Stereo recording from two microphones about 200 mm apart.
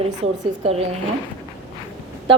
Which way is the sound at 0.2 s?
30° right (ahead or behind).